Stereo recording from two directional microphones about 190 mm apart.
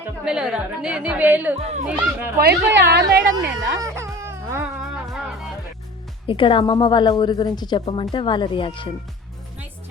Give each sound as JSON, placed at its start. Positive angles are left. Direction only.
{"t": 0.3, "sound": "a woman's voice", "side_deg": -5}
{"t": 1.5, "sound": "speech", "side_deg": -30}
{"t": 2.4, "sound": "a woman's voice", "side_deg": -65}
{"t": 3.8, "sound": "music", "side_deg": -15}
{"t": 4.8, "sound": "music", "side_deg": 0}
{"t": 6.2, "sound": "a woman's voice", "side_deg": 25}
{"t": 7.8, "sound": "a woman's voice", "side_deg": 35}